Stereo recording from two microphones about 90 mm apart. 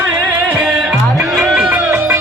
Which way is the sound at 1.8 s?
25° right (ahead or behind).